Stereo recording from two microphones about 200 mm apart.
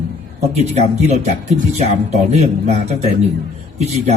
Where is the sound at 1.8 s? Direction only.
35° right (ahead or behind).